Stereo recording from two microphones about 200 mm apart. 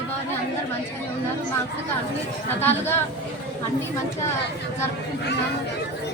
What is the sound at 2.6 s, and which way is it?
Speech, 10° left (ahead or behind).